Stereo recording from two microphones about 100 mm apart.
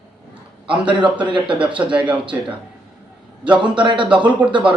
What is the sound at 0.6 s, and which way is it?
Speech, 60° right (ahead or behind).